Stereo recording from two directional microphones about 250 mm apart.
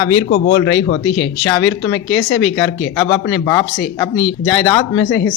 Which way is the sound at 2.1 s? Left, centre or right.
Left.